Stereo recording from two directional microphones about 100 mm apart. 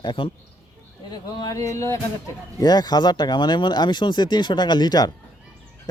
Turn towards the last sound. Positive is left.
turn(degrees=45)  # may be behind; listen again after turning